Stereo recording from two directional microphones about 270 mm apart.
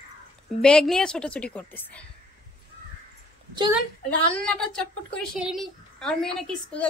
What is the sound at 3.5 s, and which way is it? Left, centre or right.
Speech, centre.